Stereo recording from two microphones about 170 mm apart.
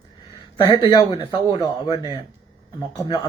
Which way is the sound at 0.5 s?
25° left (ahead or behind).